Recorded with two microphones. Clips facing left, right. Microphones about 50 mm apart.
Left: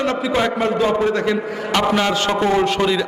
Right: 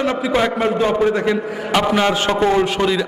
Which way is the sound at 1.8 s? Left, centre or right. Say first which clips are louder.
Even; centre.